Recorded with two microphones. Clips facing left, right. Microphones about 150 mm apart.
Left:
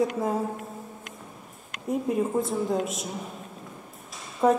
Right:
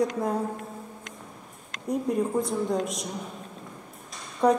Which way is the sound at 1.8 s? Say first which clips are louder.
Even; centre (ahead or behind).